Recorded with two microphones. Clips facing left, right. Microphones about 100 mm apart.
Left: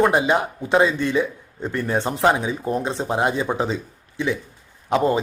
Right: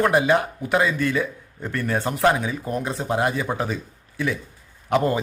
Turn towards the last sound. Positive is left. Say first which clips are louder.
# left 2 dB
turn(degrees=20)  # may be behind; listen again after turning